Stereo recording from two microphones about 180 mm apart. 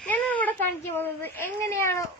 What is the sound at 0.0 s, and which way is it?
Speech, 10° left (ahead or behind).